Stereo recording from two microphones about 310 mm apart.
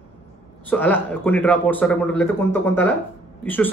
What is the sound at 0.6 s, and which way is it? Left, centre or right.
A man's voice, centre.